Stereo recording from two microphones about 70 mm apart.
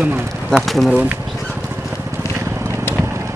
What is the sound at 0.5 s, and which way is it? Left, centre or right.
Speech, centre.